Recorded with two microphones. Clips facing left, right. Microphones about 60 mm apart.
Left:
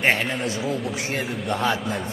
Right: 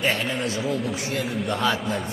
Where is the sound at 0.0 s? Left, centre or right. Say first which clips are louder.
Left 3 dB; left.